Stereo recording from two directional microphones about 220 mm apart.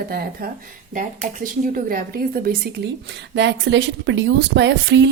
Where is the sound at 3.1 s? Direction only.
55° right (ahead or behind).